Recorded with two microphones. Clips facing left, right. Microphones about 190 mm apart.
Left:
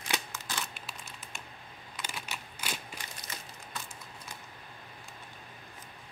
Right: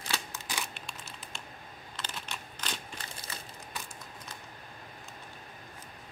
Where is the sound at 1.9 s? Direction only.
10° left (ahead or behind).